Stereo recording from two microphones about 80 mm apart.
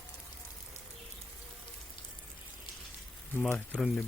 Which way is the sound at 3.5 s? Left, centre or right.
Centre.